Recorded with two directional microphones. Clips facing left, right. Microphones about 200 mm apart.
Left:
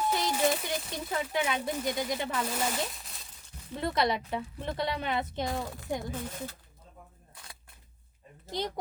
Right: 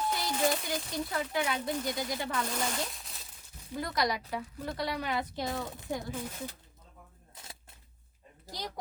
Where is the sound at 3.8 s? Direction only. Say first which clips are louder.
Left 3 dB; 25° left (ahead or behind).